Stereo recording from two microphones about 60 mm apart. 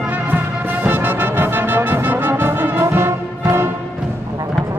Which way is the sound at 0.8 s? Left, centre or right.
Right.